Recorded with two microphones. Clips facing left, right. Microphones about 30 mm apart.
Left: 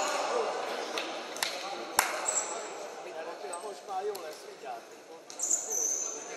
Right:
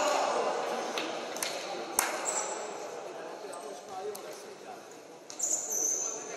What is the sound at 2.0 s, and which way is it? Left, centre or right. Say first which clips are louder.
Ping: left 4 dB; left.